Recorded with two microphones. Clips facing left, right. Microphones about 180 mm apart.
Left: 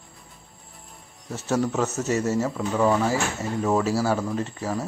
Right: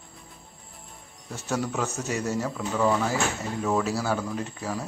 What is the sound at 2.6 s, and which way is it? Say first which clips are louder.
Speech: left 1 dB; 20° left (ahead or behind).